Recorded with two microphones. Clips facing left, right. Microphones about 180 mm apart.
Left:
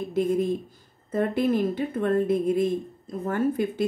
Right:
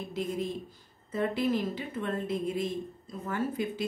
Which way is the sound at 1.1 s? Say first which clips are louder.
Left 5 dB; 50° left (ahead or behind).